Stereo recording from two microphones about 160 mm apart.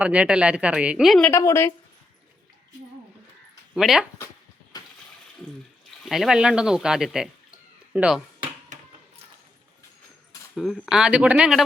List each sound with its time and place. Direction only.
0.0 s speech: 10° right (ahead or behind)
1.3 s a woman's voice: 20° left (ahead or behind)
3.8 s speech: centre (ahead or behind)
6.1 s speech: centre (ahead or behind)
10.5 s speech: centre (ahead or behind)